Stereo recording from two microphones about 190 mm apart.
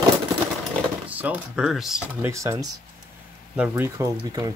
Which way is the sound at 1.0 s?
10° right (ahead or behind).